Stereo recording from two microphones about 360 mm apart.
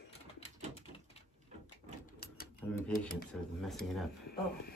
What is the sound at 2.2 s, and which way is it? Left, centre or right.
Typewriter, left.